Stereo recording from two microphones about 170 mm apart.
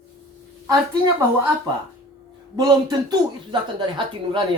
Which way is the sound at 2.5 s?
25° right (ahead or behind).